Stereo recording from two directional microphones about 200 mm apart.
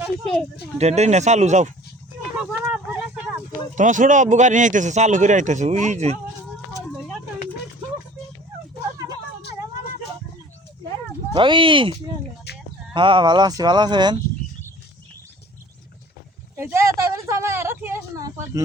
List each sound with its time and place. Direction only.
0.0 s speech: 5° left (ahead or behind)
0.8 s speech: 35° right (ahead or behind)
2.4 s vehicle: 5° right (ahead or behind)
3.8 s speech: 40° right (ahead or behind)
11.3 s speech: 25° right (ahead or behind)
12.5 s chicken: 55° left (ahead or behind)
12.9 s speech: 25° right (ahead or behind)
16.6 s a sound: 15° right (ahead or behind)